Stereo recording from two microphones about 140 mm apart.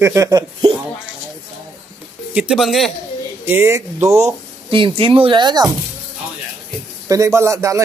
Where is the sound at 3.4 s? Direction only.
15° right (ahead or behind).